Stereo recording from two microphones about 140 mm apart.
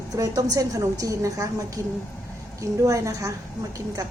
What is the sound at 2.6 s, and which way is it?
Speech, 20° right (ahead or behind).